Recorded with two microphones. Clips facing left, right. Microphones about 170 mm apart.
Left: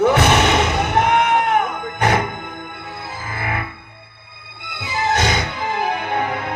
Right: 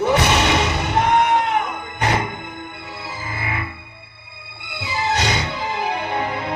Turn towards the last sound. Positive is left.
turn(degrees=55)  # may be behind; listen again after turning